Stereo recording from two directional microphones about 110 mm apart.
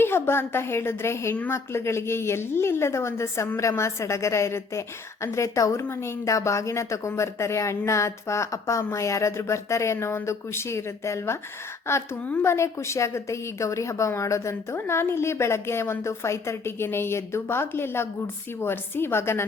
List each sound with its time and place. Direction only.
0.0 s a woman's voice: 20° left (ahead or behind)
12.2 s a woman's voice: 15° left (ahead or behind)
12.5 s a woman's voice: 25° left (ahead or behind)